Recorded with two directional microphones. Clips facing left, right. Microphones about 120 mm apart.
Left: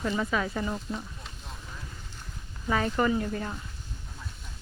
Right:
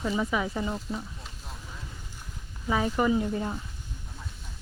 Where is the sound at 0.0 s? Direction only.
10° right (ahead or behind).